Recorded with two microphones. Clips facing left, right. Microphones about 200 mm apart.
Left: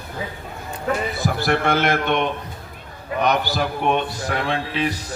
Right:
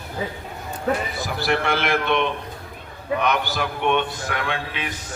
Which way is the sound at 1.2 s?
50° left (ahead or behind).